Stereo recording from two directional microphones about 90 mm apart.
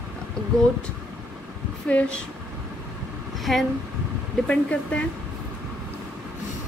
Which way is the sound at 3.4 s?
Centre (ahead or behind).